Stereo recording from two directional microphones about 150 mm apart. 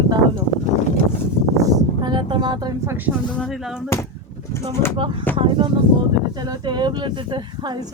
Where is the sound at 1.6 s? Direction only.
25° right (ahead or behind).